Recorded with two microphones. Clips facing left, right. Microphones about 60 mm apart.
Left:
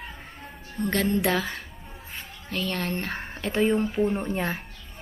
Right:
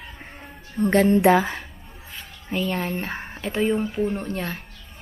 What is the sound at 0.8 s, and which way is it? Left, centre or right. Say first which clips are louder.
Speech: right 7 dB; right.